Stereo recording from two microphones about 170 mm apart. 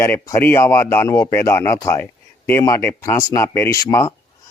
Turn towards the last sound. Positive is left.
turn(degrees=15)  # may be behind; listen again after turning